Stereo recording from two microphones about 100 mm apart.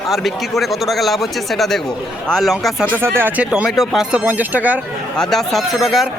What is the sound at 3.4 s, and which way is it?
Speech, 5° right (ahead or behind).